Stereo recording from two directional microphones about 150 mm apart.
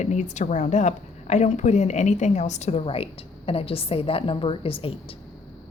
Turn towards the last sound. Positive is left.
turn(degrees=40)  # may be behind; listen again after turning